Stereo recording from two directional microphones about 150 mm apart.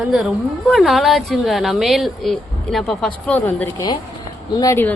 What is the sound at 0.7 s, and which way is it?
A woman's voice, centre (ahead or behind).